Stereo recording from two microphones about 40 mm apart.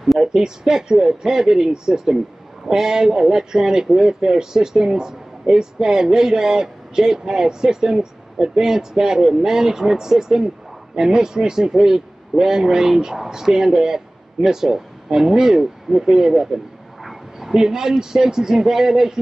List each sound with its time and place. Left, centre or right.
0.2 s a man's voice: centre